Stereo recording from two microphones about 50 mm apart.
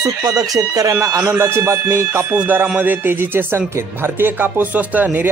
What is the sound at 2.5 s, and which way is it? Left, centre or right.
A man's voice, right.